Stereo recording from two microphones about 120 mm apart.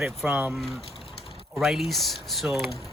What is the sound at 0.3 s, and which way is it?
Speech, 10° right (ahead or behind).